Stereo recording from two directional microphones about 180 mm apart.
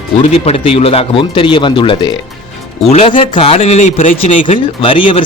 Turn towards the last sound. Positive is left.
turn(degrees=30)  # may be behind; listen again after turning